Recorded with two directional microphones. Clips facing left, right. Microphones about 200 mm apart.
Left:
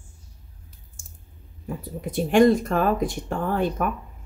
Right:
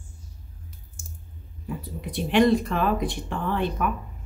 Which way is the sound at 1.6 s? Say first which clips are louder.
Left 2 dB; 45° left (ahead or behind).